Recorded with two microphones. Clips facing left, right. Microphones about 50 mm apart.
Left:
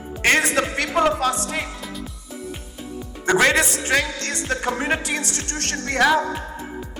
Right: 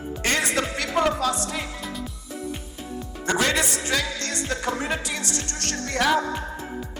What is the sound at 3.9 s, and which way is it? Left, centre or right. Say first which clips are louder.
Music: left 6 dB; left.